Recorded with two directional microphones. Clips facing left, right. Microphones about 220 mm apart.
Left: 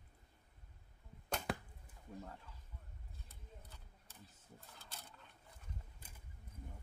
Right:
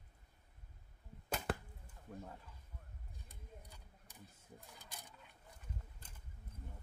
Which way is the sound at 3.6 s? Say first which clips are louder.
Right 1 dB; 15° right (ahead or behind).